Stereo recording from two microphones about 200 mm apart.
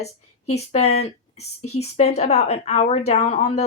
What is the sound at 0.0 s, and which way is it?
Speech, 30° left (ahead or behind).